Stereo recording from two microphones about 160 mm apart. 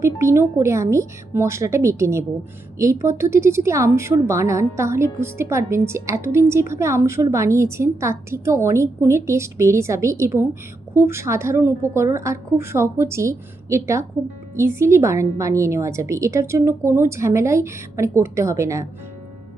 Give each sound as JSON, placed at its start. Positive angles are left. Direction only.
{"t": 0.0, "sound": "a woman's voice", "side_deg": -15}